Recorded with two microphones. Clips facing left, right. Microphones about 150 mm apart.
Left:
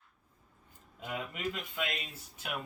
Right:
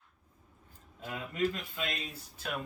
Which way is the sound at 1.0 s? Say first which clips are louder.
Right 4 dB; 15° left (ahead or behind).